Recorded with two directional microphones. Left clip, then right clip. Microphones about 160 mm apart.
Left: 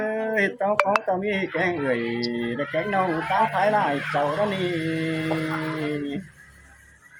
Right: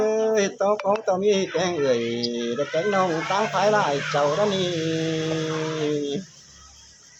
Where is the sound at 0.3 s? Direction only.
15° right (ahead or behind).